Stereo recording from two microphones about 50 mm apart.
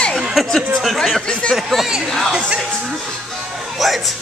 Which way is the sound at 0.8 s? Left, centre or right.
Centre.